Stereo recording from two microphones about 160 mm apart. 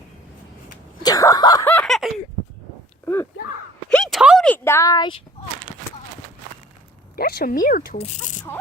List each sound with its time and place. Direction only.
1.0 s a sound: 20° left (ahead or behind)
1.6 s snicker: 5° left (ahead or behind)
3.8 s a sound: 5° left (ahead or behind)
4.4 s speech: 15° left (ahead or behind)
7.2 s speech: 70° left (ahead or behind)
7.9 s speech: 45° left (ahead or behind)